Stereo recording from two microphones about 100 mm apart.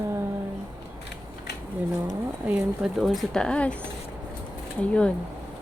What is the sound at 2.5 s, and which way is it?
Speech, 10° right (ahead or behind).